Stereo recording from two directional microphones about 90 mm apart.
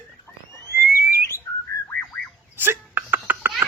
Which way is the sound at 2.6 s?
20° right (ahead or behind).